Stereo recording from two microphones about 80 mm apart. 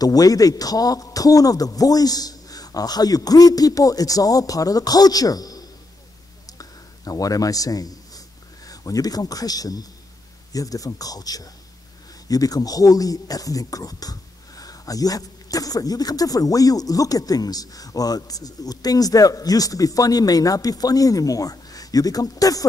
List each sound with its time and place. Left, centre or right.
0.0 s speech: left
6.4 s a sound: left
8.6 s a man's voice: left